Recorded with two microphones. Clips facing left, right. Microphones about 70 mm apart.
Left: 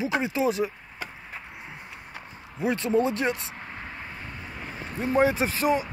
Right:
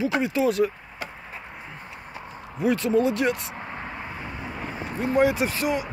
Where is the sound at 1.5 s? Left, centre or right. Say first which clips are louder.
Right 2 dB; centre.